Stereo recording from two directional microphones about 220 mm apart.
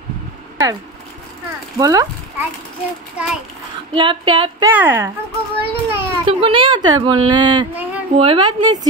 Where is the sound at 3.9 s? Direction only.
20° right (ahead or behind).